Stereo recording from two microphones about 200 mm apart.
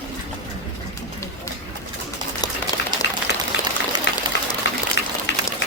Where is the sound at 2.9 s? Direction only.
20° right (ahead or behind).